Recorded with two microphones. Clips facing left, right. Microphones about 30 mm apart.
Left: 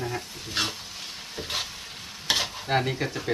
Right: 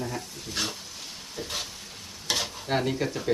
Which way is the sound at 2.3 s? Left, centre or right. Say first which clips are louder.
Left 2 dB; left.